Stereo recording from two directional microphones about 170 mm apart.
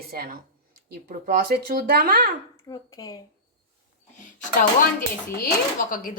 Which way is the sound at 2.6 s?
20° left (ahead or behind).